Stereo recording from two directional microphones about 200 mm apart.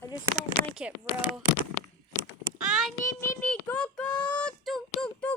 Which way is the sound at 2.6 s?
Centre (ahead or behind).